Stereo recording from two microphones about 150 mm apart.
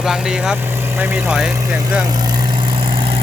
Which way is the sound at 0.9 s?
15° right (ahead or behind).